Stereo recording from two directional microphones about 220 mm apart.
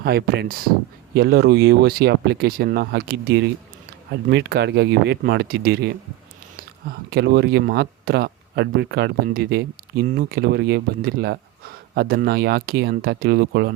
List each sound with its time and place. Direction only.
0.0 s speech: 45° right (ahead or behind)